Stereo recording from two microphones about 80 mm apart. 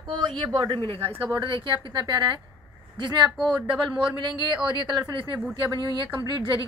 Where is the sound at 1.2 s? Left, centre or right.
Right.